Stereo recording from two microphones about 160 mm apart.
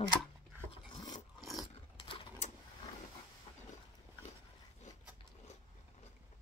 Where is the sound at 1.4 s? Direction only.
Centre (ahead or behind).